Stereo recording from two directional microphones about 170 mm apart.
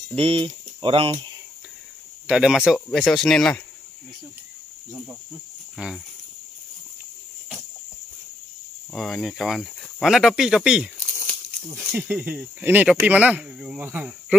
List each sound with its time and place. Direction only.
0.1 s speech: 30° right (ahead or behind)
2.2 s speech: 5° right (ahead or behind)
5.8 s speech: 5° right (ahead or behind)
8.9 s speech: centre (ahead or behind)